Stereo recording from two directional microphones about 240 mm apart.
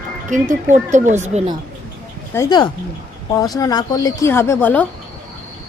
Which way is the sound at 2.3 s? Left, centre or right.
Centre.